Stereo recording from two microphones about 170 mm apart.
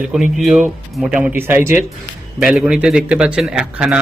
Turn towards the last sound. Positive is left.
turn(degrees=-5)  # may be behind; listen again after turning